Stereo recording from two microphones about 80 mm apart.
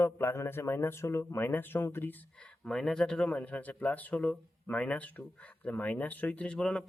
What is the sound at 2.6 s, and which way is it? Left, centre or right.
Speech, centre.